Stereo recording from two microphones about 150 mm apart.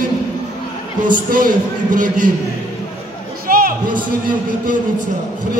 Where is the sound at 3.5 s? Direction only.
70° right (ahead or behind).